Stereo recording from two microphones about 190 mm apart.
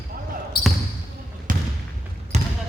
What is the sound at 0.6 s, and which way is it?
Basketball bounce, 55° left (ahead or behind).